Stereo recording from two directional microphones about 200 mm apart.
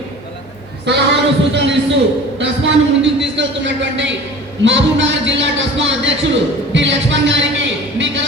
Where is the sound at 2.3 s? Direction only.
65° right (ahead or behind).